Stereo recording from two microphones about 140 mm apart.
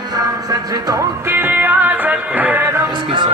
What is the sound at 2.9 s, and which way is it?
Speech, 35° right (ahead or behind).